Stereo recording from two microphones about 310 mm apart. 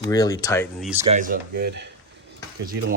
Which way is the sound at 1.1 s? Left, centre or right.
Right.